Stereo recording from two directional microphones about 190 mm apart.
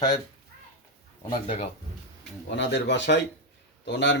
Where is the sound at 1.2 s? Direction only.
30° left (ahead or behind).